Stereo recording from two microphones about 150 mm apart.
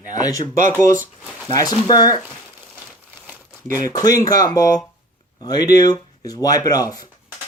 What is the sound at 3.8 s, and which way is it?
Speech, 25° left (ahead or behind).